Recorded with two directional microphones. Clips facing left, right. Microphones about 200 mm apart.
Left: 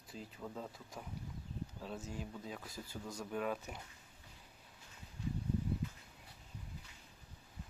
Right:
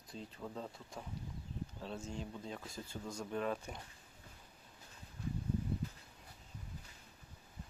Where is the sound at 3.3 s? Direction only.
5° left (ahead or behind).